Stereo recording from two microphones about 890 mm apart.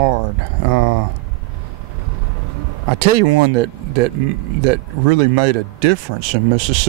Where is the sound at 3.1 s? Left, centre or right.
Right.